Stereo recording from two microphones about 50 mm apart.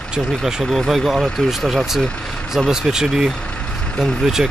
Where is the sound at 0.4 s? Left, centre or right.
Centre.